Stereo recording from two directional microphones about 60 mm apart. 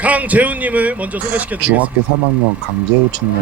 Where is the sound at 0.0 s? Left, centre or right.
Right.